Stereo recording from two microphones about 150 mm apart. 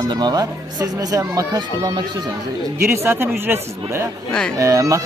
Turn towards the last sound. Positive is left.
turn(degrees=-20)  # may be behind; listen again after turning